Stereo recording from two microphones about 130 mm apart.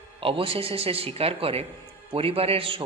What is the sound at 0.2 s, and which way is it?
Speech, 45° right (ahead or behind).